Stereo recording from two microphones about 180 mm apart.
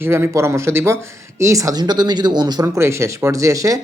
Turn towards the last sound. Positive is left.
turn(degrees=-20)  # may be behind; listen again after turning